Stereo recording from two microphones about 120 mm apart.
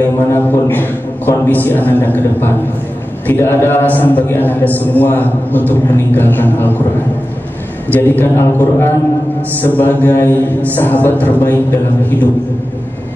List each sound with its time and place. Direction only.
0.0 s a man's voice: 20° left (ahead or behind)
7.9 s a man's voice: 15° left (ahead or behind)